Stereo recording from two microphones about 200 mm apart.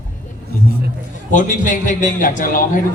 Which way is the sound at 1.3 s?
40° left (ahead or behind).